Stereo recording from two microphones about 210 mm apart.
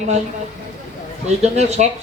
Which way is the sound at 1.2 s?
30° right (ahead or behind).